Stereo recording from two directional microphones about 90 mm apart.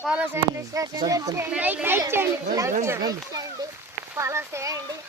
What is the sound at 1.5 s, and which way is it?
A child's voice, 15° right (ahead or behind).